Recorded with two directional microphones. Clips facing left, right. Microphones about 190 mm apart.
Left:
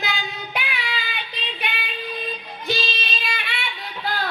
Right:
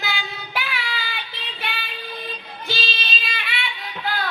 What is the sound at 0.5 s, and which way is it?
Child singing, 20° left (ahead or behind).